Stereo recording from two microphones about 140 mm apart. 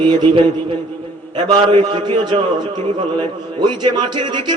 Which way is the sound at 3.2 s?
30° right (ahead or behind).